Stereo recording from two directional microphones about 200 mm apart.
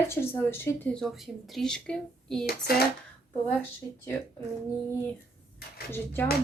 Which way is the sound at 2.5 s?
50° left (ahead or behind).